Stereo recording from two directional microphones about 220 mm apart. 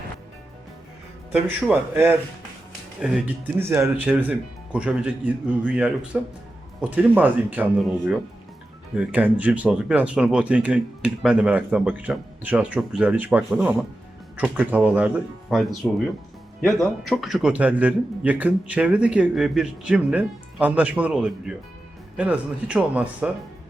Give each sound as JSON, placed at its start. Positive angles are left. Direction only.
{"t": 1.3, "sound": "speech", "side_deg": -5}